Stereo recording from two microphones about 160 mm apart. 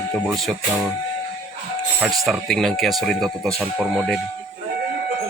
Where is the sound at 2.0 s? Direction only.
Centre (ahead or behind).